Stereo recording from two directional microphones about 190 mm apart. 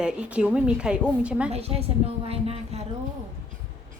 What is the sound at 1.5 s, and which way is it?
A woman's voice, 30° right (ahead or behind).